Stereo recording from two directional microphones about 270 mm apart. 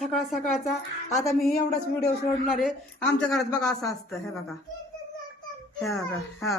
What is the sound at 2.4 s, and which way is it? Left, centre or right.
Speech, centre.